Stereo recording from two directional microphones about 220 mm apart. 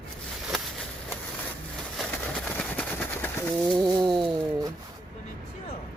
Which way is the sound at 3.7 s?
20° right (ahead or behind).